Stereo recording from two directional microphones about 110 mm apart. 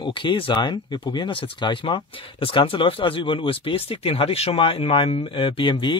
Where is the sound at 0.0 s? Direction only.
50° left (ahead or behind).